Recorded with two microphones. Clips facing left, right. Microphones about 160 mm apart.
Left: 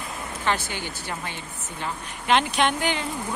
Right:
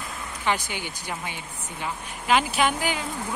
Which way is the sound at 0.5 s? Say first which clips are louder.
Even; 15° right (ahead or behind).